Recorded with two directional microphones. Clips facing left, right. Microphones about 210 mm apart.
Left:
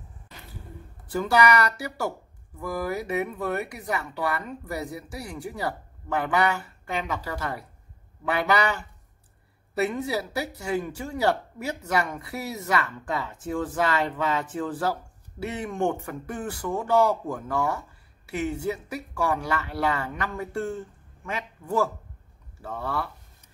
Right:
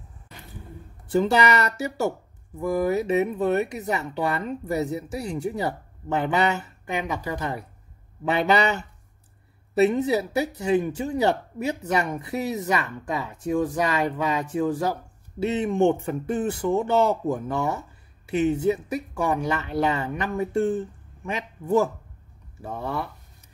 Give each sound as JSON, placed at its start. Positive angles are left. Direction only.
{"t": 1.1, "sound": "speech", "side_deg": -25}